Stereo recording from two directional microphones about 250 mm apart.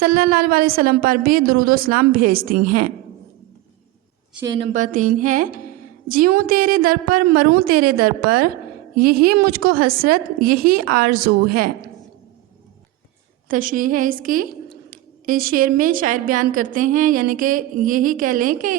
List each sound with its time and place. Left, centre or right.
0.0 s a woman's voice: right
4.4 s a woman's voice: centre
4.7 s a woman's voice: right
13.5 s a woman's voice: right